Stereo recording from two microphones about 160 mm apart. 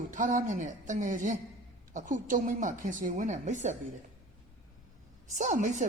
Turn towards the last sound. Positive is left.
turn(degrees=-50)  # may be behind; listen again after turning